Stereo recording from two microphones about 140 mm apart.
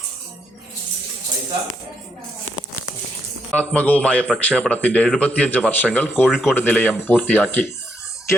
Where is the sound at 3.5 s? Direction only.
10° left (ahead or behind).